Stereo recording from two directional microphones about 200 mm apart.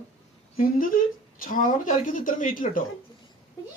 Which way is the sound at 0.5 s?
45° left (ahead or behind).